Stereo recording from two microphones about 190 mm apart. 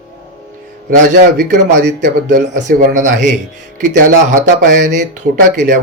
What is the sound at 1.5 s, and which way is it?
Speech, 40° right (ahead or behind).